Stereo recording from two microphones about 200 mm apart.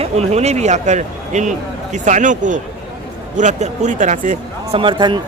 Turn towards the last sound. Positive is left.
turn(degrees=-20)  # may be behind; listen again after turning